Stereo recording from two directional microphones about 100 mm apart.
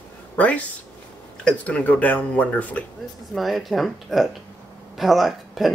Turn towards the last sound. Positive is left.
turn(degrees=0)  # may be behind; listen again after turning